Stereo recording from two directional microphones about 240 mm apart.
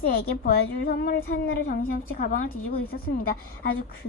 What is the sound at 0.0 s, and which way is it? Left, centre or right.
A woman's voice, left.